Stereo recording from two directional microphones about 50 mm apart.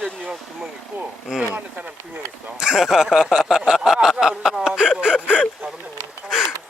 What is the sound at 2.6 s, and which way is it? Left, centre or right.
Speech, centre.